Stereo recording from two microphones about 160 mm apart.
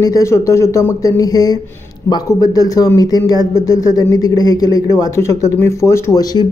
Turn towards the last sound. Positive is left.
turn(degrees=20)  # may be behind; listen again after turning